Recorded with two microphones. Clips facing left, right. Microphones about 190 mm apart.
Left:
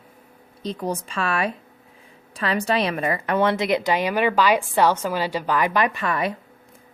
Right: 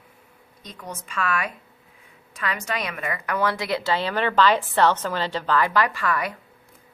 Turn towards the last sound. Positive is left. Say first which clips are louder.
# left 2 dB
turn(degrees=25)  # may be behind; listen again after turning